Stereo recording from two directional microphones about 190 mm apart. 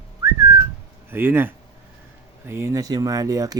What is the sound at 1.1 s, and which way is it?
A man's voice, 10° right (ahead or behind).